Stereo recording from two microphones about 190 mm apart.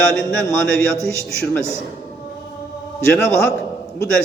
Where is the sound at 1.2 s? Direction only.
5° left (ahead or behind).